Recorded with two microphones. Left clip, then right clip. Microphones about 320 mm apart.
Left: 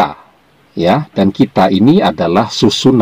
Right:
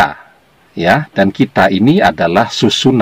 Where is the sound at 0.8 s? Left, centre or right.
Centre.